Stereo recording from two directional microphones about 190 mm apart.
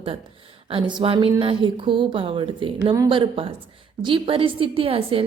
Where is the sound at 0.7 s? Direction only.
25° right (ahead or behind).